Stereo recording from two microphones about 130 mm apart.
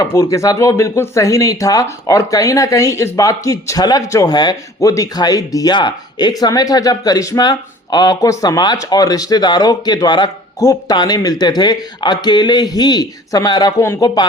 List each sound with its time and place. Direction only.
0.0 s speech: 25° left (ahead or behind)